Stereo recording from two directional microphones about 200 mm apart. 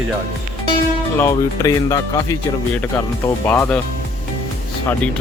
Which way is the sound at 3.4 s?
10° left (ahead or behind).